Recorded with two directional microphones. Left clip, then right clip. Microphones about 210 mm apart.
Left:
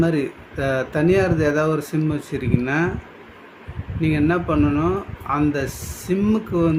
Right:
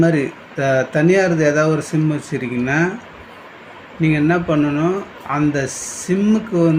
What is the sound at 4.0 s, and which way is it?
Speech, 10° left (ahead or behind).